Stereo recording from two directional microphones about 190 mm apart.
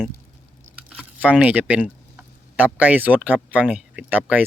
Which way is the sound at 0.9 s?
5° right (ahead or behind).